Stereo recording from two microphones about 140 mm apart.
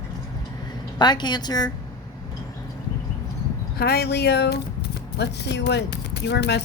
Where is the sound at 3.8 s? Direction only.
90° left.